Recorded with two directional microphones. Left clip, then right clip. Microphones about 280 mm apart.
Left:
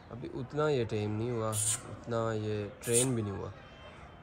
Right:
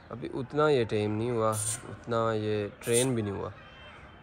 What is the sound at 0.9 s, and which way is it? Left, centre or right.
Speech, left.